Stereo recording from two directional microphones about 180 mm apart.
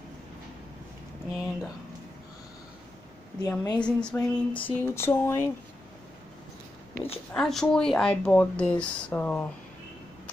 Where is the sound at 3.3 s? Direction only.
20° left (ahead or behind).